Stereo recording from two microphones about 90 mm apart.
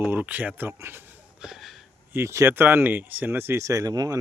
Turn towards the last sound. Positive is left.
turn(degrees=-40)  # may be behind; listen again after turning